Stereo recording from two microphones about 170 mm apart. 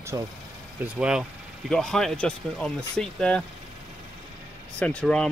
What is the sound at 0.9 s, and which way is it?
Speech, 5° right (ahead or behind).